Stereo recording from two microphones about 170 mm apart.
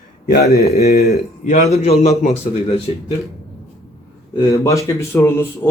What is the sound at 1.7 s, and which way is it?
A man's voice, 40° left (ahead or behind).